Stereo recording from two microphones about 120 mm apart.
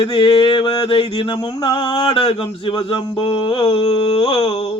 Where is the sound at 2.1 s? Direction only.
50° left (ahead or behind).